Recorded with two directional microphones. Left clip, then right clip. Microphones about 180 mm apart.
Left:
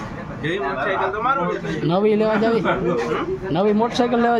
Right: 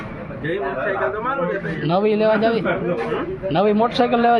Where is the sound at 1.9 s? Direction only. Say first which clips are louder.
Right 1 dB; 20° left (ahead or behind).